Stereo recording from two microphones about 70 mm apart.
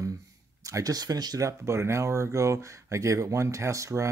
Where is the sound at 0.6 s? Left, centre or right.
Right.